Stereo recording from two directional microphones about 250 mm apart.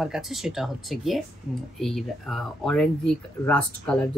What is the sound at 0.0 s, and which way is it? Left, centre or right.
Speech, centre.